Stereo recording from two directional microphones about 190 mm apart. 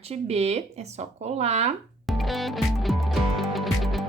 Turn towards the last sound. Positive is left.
turn(degrees=0)  # may be behind; listen again after turning